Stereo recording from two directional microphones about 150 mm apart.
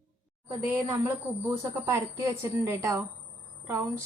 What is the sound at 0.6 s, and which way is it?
A woman's voice, 20° right (ahead or behind).